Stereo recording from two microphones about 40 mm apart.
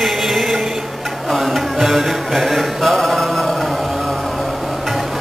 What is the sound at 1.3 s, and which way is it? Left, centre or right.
Mantra, centre.